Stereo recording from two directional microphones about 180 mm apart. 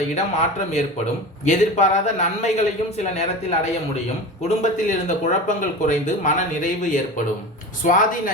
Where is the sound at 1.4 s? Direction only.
40° left (ahead or behind).